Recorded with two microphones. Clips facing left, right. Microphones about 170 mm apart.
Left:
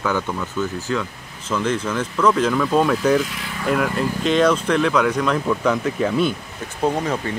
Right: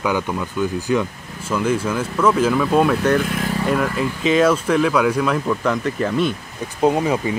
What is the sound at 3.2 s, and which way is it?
Speech, 50° right (ahead or behind).